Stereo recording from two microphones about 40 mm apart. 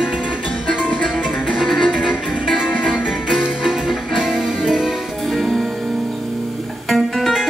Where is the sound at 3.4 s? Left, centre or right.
Centre.